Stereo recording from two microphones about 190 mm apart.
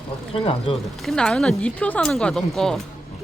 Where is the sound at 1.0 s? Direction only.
Centre (ahead or behind).